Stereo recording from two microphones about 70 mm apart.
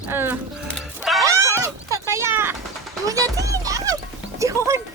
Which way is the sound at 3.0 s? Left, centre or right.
Right.